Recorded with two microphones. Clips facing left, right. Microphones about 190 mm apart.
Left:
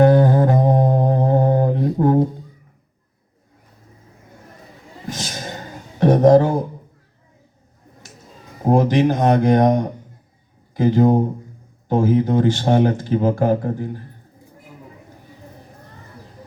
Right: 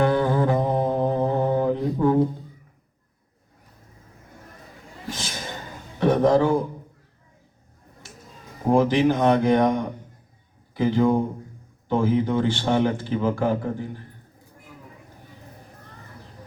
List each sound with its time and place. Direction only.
0.0 s music: 45° left (ahead or behind)
5.1 s a sound: 45° left (ahead or behind)
8.7 s speech: 45° left (ahead or behind)